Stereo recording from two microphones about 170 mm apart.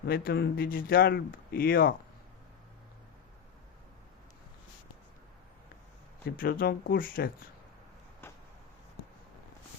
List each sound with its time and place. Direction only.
0.0 s speech: 65° left (ahead or behind)
6.2 s speech: 60° left (ahead or behind)
8.2 s a sound: 15° left (ahead or behind)